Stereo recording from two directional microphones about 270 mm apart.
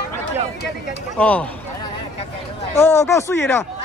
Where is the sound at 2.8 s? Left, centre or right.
Centre.